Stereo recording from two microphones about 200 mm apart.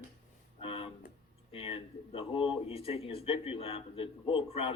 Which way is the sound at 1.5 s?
25° left (ahead or behind).